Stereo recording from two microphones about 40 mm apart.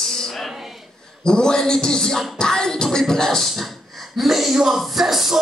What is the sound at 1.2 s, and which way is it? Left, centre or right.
Music, centre.